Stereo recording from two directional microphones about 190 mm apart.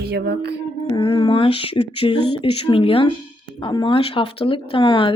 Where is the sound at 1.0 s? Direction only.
25° left (ahead or behind).